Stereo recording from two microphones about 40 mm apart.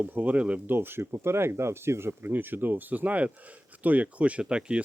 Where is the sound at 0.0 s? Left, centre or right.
Right.